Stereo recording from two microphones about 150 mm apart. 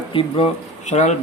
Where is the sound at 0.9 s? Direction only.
50° left (ahead or behind).